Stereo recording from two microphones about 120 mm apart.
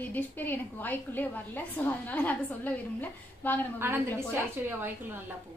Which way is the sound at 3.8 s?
20° right (ahead or behind).